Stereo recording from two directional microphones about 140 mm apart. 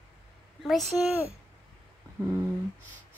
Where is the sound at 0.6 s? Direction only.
Centre (ahead or behind).